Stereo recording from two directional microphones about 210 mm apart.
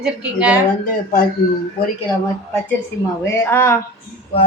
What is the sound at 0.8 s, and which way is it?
Speech, 40° left (ahead or behind).